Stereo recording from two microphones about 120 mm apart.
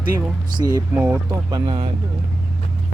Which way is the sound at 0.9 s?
15° right (ahead or behind).